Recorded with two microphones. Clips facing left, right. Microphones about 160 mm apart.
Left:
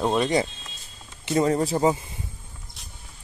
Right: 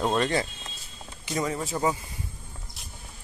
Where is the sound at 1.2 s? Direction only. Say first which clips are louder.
Left 8 dB; 30° left (ahead or behind).